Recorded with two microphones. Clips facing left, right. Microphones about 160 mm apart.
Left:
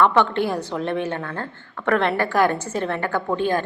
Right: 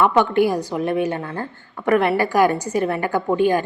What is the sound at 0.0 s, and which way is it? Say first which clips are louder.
A woman's voice: right 2 dB; 10° right (ahead or behind).